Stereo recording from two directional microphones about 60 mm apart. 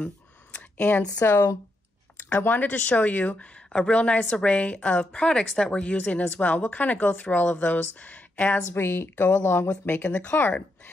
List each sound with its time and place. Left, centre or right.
0.0 s a sound: left
1.2 s a woman's voice: left
8.7 s speech: left